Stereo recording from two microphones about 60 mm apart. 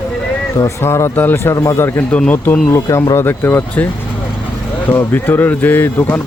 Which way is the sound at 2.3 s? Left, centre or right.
Left.